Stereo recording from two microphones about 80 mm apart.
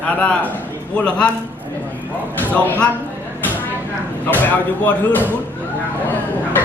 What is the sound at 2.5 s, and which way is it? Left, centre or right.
Speech, centre.